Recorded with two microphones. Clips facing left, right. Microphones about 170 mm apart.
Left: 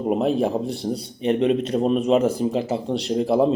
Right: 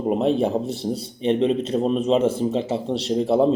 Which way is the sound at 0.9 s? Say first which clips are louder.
Right 1 dB; 30° right (ahead or behind).